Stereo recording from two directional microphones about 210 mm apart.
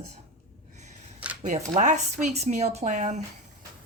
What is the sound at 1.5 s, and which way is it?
Speech, 35° right (ahead or behind).